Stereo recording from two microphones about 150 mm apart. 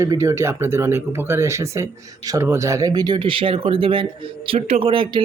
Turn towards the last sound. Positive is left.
turn(degrees=-35)  # may be behind; listen again after turning